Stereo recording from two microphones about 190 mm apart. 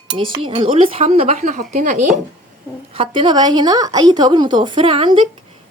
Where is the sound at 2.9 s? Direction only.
25° right (ahead or behind).